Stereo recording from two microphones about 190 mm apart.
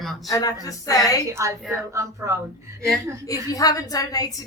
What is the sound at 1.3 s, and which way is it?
Speech, 15° right (ahead or behind).